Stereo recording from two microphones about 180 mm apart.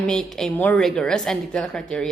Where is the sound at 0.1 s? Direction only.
5° left (ahead or behind).